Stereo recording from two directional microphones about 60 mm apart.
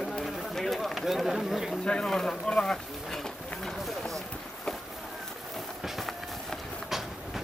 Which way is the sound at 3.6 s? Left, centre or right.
Centre.